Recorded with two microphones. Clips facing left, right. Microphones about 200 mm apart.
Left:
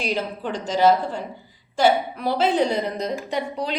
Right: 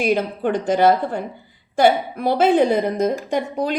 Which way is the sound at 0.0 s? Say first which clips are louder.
Right 7 dB; 55° right (ahead or behind).